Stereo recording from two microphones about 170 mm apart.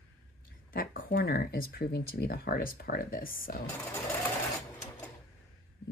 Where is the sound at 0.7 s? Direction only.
60° left (ahead or behind).